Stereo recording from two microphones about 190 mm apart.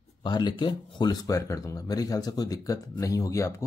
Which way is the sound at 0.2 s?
25° left (ahead or behind).